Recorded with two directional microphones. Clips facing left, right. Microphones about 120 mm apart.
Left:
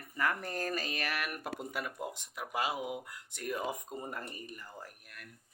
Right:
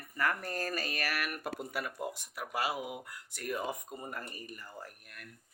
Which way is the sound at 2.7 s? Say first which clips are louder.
Left 2 dB; 10° right (ahead or behind).